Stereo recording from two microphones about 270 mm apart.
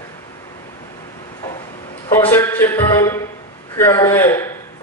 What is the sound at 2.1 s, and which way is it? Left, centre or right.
A man's voice, centre.